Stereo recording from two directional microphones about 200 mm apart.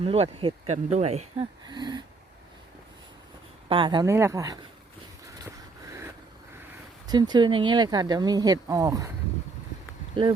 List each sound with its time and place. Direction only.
0.0 s speech: 30° right (ahead or behind)
1.6 s speech: 20° right (ahead or behind)
3.7 s speech: 25° right (ahead or behind)
7.1 s speech: 20° right (ahead or behind)